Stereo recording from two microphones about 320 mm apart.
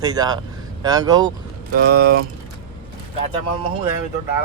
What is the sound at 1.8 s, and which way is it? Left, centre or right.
Speech, right.